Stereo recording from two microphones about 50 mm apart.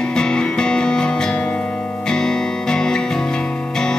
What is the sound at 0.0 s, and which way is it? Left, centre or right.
Music, centre.